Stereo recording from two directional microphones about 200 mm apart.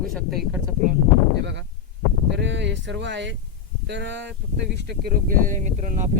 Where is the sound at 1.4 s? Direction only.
60° right (ahead or behind).